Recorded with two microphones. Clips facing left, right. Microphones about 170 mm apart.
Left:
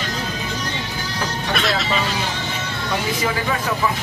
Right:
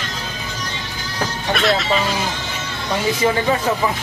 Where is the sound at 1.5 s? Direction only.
Centre (ahead or behind).